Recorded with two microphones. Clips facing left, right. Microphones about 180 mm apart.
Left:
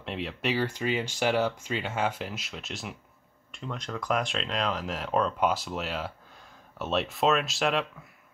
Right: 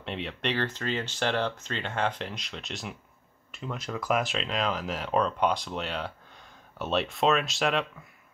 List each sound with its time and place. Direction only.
0.0 s speech: centre (ahead or behind)